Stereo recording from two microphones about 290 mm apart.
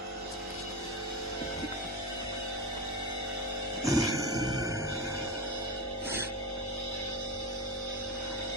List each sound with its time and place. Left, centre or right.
3.8 s music: centre